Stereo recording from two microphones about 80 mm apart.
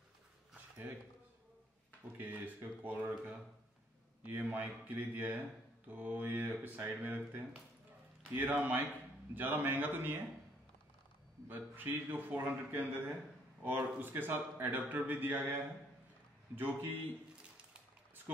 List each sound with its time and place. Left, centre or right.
2.1 s speech: right
11.4 s speech: right